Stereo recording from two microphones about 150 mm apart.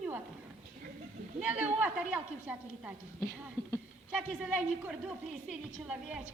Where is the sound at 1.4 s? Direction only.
10° right (ahead or behind).